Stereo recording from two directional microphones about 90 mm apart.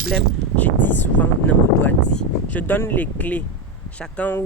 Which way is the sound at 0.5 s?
20° left (ahead or behind).